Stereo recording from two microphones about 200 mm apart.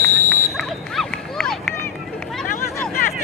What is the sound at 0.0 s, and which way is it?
Smoke detector, 5° left (ahead or behind).